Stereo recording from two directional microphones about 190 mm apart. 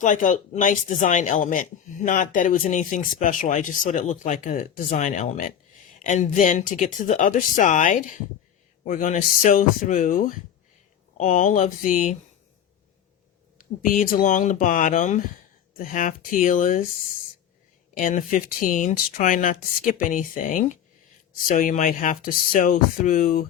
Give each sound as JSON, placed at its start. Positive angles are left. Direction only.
{"t": 0.0, "sound": "speech", "side_deg": 40}
{"t": 13.6, "sound": "speech", "side_deg": 45}
{"t": 17.9, "sound": "speech", "side_deg": 40}